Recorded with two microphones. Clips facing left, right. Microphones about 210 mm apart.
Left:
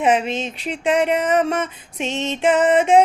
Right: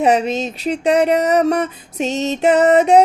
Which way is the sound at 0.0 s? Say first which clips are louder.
Right 3 dB; 40° right (ahead or behind).